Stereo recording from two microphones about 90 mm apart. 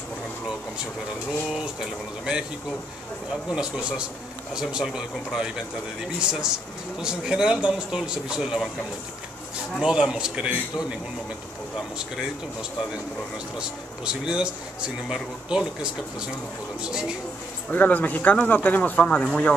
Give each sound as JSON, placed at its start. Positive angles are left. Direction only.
{"t": 1.5, "sound": "a man's voice", "side_deg": -10}
{"t": 3.5, "sound": "a man's voice", "side_deg": -5}
{"t": 7.0, "sound": "a man's voice", "side_deg": -10}
{"t": 9.8, "sound": "a man's voice", "side_deg": -10}
{"t": 13.6, "sound": "a man's voice", "side_deg": -10}
{"t": 17.6, "sound": "speech", "side_deg": 15}